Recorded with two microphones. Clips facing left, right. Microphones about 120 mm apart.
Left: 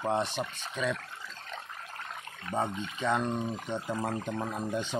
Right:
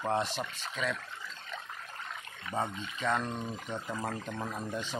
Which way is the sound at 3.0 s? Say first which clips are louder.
Left 3 dB; 15° left (ahead or behind).